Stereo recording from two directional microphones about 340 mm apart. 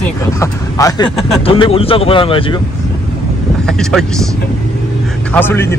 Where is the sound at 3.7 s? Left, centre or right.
Centre.